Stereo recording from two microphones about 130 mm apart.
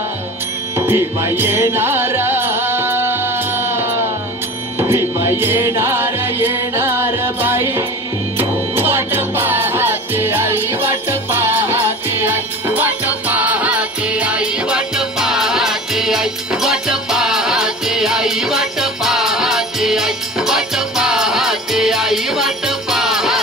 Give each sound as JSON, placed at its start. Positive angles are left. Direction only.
{"t": 0.7, "sound": "music", "side_deg": -20}